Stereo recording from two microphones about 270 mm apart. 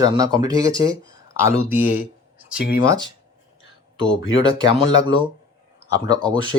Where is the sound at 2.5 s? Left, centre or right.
Left.